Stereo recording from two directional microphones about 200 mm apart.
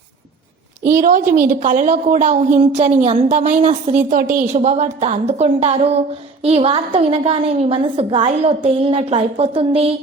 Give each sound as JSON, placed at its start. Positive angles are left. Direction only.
{"t": 0.9, "sound": "a woman's voice", "side_deg": -45}